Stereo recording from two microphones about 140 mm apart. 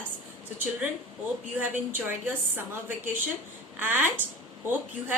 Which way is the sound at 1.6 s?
15° right (ahead or behind).